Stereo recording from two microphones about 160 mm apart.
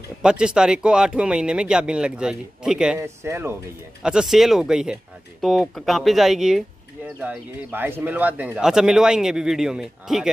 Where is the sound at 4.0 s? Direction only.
5° right (ahead or behind).